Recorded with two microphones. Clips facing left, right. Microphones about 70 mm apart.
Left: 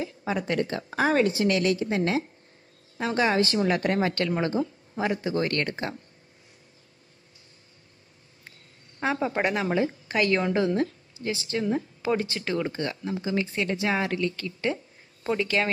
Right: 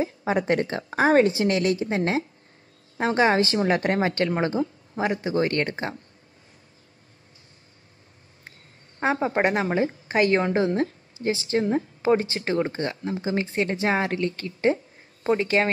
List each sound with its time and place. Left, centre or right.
0.0 s a sound: right
0.7 s speech: right
9.0 s a woman's voice: right